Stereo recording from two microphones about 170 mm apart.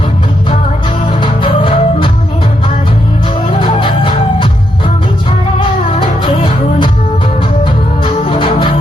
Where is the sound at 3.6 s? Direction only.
30° left (ahead or behind).